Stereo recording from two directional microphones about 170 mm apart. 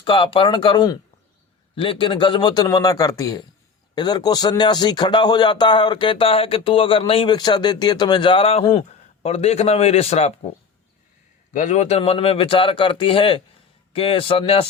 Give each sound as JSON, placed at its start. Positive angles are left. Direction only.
{"t": 0.0, "sound": "speech", "side_deg": 30}
{"t": 11.5, "sound": "speech", "side_deg": 45}